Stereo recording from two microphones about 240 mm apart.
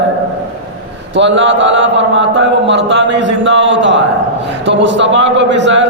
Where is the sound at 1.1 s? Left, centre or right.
Right.